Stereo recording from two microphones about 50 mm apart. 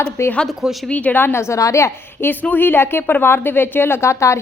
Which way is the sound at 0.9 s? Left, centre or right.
Left.